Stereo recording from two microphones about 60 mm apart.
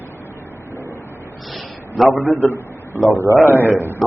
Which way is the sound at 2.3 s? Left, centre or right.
Left.